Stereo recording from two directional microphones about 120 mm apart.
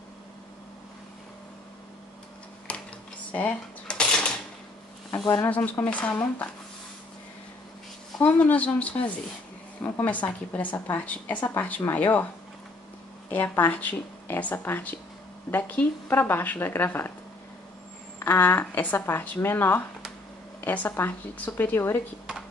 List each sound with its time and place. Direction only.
2.7 s a sound: 10° left (ahead or behind)
5.4 s a woman's voice: 15° left (ahead or behind)
8.2 s a woman's voice: 10° left (ahead or behind)
13.3 s a woman's voice: 15° left (ahead or behind)
18.2 s a woman's voice: 15° left (ahead or behind)